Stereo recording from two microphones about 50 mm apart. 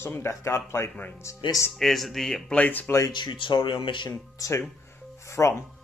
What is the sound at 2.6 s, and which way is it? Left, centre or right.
Speech, left.